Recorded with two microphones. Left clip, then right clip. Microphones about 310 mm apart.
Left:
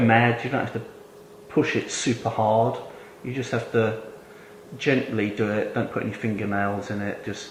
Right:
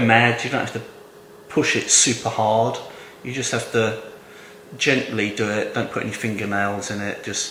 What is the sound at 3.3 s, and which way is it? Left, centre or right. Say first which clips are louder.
Speech: right 3 dB; centre.